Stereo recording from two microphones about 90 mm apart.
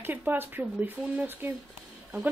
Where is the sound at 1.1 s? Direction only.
20° right (ahead or behind).